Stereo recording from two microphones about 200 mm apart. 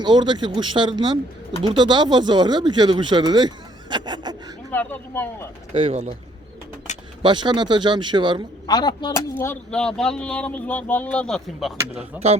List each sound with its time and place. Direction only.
0.0 s speech: 20° right (ahead or behind)
4.7 s speech: 10° left (ahead or behind)
5.7 s a man's voice: 30° right (ahead or behind)
7.2 s speech: 25° right (ahead or behind)
8.6 s speech: 20° left (ahead or behind); by 12.0 s centre (ahead or behind)